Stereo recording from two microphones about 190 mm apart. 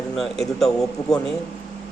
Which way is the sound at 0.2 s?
Centre (ahead or behind).